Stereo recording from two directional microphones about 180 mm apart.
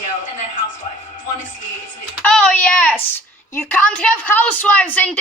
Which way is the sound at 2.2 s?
5° left (ahead or behind).